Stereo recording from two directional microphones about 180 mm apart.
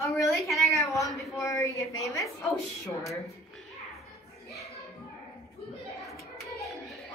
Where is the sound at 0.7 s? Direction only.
15° left (ahead or behind).